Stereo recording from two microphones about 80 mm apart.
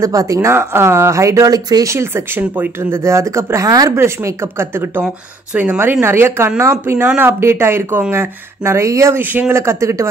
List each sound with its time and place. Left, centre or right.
0.0 s speech: right
1.5 s speech: right
1.9 s speech: right
3.9 s speech: right